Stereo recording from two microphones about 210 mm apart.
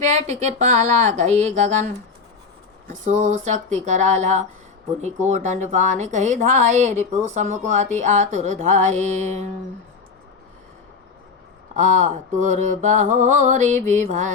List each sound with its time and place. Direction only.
0.1 s a woman's voice: 30° right (ahead or behind)
2.9 s a woman's voice: 35° right (ahead or behind)
11.7 s a woman's voice: 35° right (ahead or behind)